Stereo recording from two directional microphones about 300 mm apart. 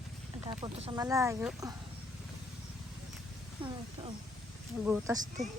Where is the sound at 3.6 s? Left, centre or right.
Centre.